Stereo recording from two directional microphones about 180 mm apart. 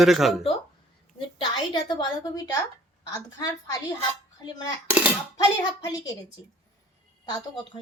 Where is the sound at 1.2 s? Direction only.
25° left (ahead or behind).